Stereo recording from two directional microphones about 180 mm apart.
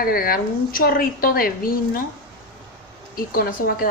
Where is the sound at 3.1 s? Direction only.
55° left (ahead or behind).